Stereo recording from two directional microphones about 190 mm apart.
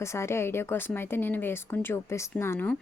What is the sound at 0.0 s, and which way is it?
A woman's voice, 15° left (ahead or behind).